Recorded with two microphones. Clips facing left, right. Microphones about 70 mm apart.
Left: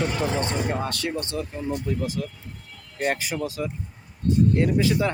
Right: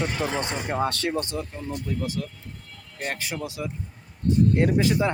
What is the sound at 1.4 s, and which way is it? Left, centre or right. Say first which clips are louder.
Speech: left 4 dB; centre.